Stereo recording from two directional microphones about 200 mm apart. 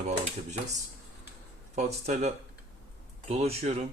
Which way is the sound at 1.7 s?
35° right (ahead or behind).